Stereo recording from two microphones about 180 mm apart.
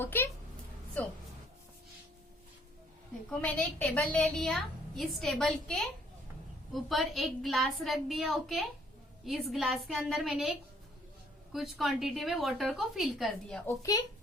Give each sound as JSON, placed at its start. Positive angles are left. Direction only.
{"t": 0.0, "sound": "speech", "side_deg": 10}
{"t": 3.2, "sound": "a woman's voice", "side_deg": 5}
{"t": 11.5, "sound": "a woman's voice", "side_deg": 0}
{"t": 13.7, "sound": "speech", "side_deg": 20}